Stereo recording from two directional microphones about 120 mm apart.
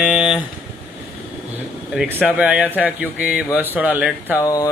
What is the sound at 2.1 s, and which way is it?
Speech, 15° right (ahead or behind).